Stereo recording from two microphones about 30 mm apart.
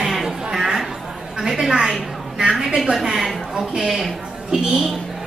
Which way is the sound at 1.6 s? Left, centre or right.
Right.